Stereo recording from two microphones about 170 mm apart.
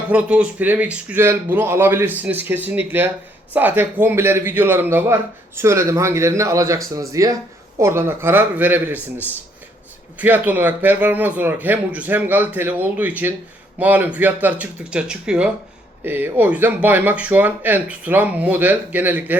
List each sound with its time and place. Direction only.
0.1 s speech: 5° right (ahead or behind)
10.2 s speech: 10° right (ahead or behind)